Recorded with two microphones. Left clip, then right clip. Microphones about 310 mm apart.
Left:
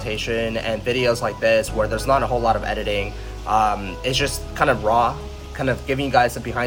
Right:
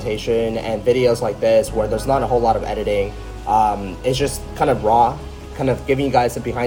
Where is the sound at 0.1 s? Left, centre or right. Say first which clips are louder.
Right 4 dB; left.